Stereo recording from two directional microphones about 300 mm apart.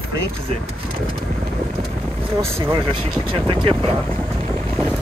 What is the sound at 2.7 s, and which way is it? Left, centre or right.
Speech, centre.